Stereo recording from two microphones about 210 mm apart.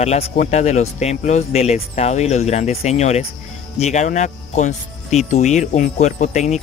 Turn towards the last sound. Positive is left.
turn(degrees=35)  # may be behind; listen again after turning